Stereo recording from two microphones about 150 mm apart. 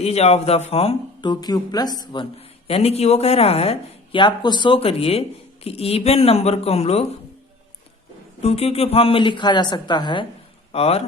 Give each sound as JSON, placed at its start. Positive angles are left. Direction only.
{"t": 0.0, "sound": "speech", "side_deg": 45}
{"t": 2.6, "sound": "speech", "side_deg": 40}
{"t": 8.4, "sound": "speech", "side_deg": 40}
{"t": 10.7, "sound": "speech", "side_deg": 40}